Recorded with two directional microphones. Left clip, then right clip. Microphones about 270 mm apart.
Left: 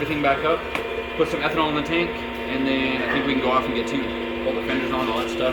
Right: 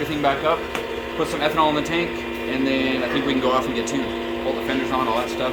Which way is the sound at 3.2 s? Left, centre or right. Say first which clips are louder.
Right 1 dB; right.